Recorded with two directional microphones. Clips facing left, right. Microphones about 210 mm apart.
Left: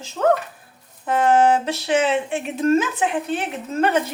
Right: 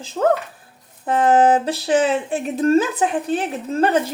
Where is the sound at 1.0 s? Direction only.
35° right (ahead or behind).